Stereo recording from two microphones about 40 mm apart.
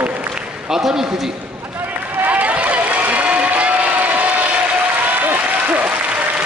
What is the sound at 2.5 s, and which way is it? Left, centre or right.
Crowd, right.